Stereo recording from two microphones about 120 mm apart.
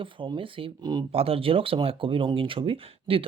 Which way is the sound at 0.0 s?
45° right (ahead or behind).